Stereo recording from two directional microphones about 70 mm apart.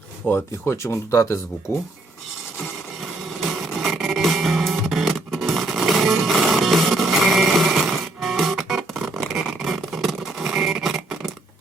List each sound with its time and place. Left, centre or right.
0.2 s speech: left
0.6 s speech: left
3.5 s music: centre
10.5 s guitar: centre